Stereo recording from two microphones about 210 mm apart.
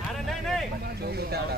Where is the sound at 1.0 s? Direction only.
50° right (ahead or behind).